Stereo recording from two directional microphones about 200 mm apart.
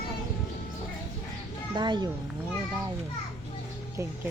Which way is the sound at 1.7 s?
20° right (ahead or behind).